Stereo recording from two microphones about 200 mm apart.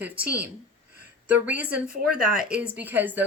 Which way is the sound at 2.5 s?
5° right (ahead or behind).